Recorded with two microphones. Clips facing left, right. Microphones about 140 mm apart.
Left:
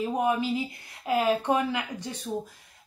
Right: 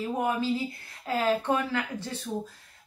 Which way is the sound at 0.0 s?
15° left (ahead or behind).